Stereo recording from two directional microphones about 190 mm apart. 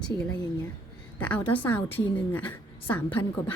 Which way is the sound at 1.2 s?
5° left (ahead or behind).